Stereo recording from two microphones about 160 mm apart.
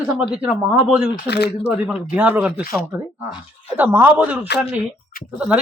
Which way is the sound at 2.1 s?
10° right (ahead or behind).